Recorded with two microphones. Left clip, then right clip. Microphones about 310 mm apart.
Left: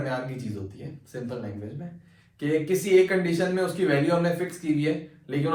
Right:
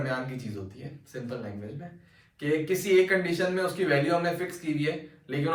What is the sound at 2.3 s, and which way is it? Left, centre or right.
Speech, centre.